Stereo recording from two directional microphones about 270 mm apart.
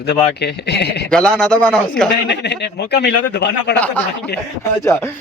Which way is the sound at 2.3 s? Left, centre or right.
Left.